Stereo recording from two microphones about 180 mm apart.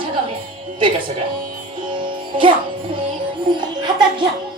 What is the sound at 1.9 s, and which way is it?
Music, 25° right (ahead or behind).